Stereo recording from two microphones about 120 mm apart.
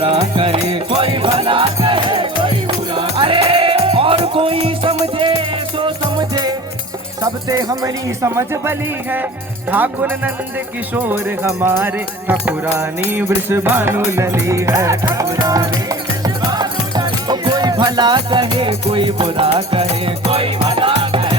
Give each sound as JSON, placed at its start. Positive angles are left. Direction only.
{"t": 0.0, "sound": "music", "side_deg": -50}
{"t": 9.7, "sound": "speech", "side_deg": -15}